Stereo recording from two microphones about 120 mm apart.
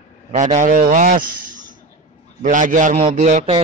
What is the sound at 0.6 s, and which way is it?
Speech, 90° right.